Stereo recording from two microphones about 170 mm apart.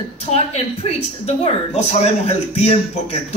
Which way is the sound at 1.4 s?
40° left (ahead or behind).